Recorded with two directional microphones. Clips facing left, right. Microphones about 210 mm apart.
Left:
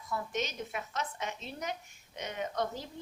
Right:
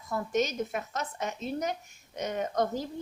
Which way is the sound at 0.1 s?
45° right (ahead or behind).